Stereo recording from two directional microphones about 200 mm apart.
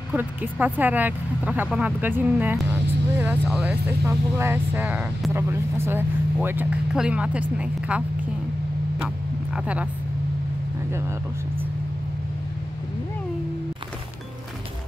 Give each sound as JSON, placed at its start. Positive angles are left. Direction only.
{"t": 0.1, "sound": "speech", "side_deg": -10}
{"t": 9.5, "sound": "speech", "side_deg": -5}